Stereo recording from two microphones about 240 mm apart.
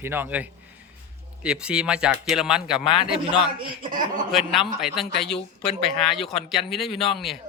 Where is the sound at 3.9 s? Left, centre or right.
Right.